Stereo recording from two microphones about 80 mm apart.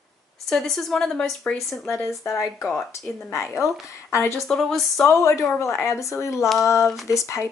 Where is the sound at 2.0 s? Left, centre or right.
Left.